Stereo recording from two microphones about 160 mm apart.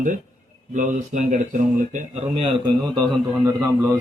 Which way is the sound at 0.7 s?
55° right (ahead or behind).